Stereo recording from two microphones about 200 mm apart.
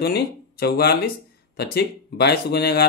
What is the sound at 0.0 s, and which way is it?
Speech, 55° left (ahead or behind).